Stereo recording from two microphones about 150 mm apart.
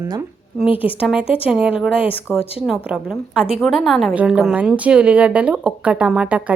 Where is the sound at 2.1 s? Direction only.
15° left (ahead or behind).